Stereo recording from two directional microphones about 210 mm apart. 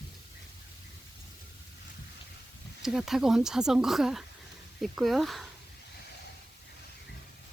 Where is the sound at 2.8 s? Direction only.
Centre (ahead or behind).